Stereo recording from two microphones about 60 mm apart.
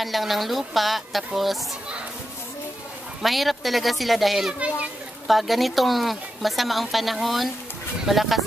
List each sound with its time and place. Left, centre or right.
0.0 s speech: centre
3.2 s speech: centre
4.5 s a child's voice: centre
5.2 s speech: centre